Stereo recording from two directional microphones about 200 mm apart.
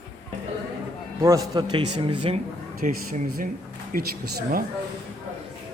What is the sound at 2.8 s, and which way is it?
Speech, 45° right (ahead or behind).